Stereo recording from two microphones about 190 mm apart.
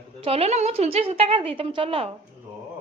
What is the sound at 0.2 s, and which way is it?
Speech, 30° right (ahead or behind).